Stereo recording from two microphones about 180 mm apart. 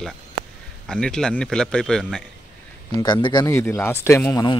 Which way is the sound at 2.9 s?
25° left (ahead or behind).